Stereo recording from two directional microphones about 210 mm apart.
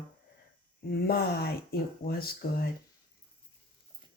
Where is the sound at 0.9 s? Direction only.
45° left (ahead or behind).